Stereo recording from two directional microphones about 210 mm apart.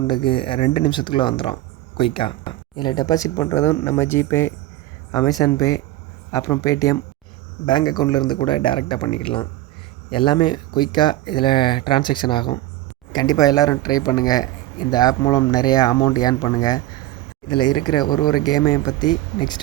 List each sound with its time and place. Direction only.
0.1 s speech: 25° left (ahead or behind)